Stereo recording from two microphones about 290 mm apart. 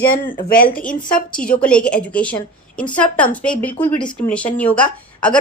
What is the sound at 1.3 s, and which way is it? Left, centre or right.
A woman's voice, centre.